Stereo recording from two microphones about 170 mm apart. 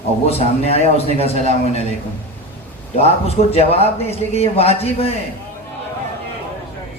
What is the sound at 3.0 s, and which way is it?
A man's voice, 35° left (ahead or behind).